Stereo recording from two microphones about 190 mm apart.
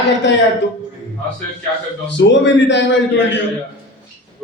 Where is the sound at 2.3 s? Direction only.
75° left (ahead or behind).